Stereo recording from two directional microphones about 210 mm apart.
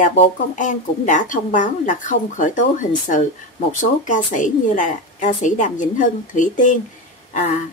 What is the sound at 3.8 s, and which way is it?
Speech, 35° left (ahead or behind).